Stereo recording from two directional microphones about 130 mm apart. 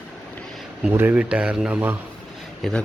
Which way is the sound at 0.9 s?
15° right (ahead or behind).